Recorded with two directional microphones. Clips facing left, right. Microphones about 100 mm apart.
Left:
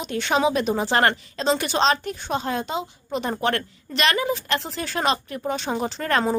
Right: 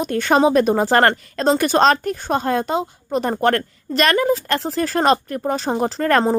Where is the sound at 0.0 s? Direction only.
45° right (ahead or behind).